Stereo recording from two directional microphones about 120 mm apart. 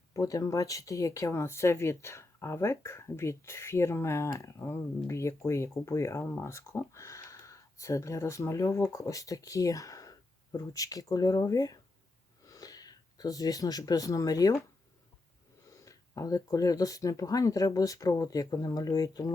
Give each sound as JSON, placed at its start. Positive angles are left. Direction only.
{"t": 0.1, "sound": "speech", "side_deg": 30}
{"t": 15.8, "sound": "speech", "side_deg": 30}